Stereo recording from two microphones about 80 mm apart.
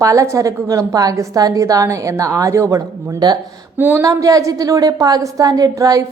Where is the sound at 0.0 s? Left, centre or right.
Right.